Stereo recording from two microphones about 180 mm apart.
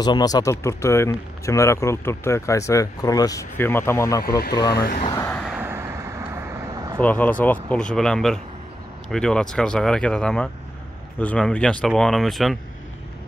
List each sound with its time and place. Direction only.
0.0 s speech: 20° left (ahead or behind)
4.2 s speech: 60° left (ahead or behind)
5.1 s a sound: 15° left (ahead or behind)
5.4 s vehicle: 5° right (ahead or behind)
7.0 s speech: 10° left (ahead or behind)